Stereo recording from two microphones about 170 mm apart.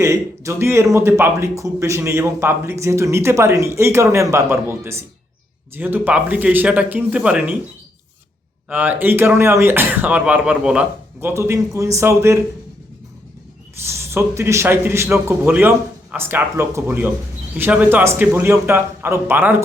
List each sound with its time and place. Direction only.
0.0 s speech: 15° right (ahead or behind)
8.7 s speech: 10° right (ahead or behind)
13.8 s speech: 15° right (ahead or behind)